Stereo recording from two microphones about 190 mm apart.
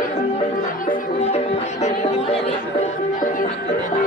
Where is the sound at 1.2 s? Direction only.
35° left (ahead or behind).